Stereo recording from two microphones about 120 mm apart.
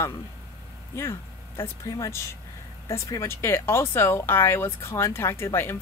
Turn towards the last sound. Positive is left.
turn(degrees=20)  # may be behind; listen again after turning